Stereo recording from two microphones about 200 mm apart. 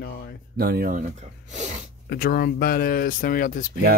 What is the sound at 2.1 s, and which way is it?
Mantra, 50° left (ahead or behind).